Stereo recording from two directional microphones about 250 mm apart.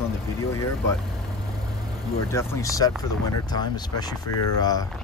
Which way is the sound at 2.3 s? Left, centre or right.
Centre.